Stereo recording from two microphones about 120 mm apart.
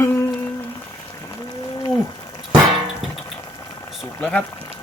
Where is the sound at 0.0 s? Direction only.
20° left (ahead or behind).